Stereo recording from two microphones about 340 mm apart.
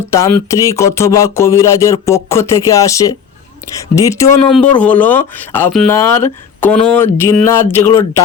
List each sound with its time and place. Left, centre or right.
0.1 s speech: centre